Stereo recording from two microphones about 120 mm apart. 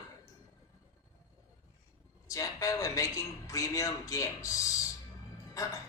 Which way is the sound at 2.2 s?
25° left (ahead or behind).